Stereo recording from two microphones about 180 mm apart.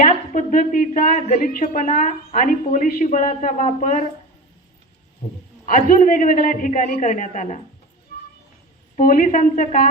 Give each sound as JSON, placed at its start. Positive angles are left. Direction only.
{"t": 0.0, "sound": "a woman's voice", "side_deg": 50}
{"t": 5.6, "sound": "a woman's voice", "side_deg": 45}
{"t": 8.1, "sound": "a sound", "side_deg": 55}
{"t": 9.0, "sound": "a woman's voice", "side_deg": 50}